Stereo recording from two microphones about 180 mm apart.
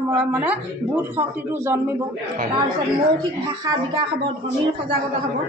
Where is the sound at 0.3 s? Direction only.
10° right (ahead or behind).